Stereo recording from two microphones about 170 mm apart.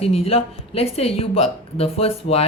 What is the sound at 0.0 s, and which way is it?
A woman's voice, 35° left (ahead or behind).